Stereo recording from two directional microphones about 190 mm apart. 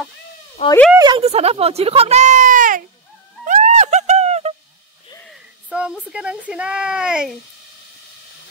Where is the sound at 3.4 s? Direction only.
40° right (ahead or behind).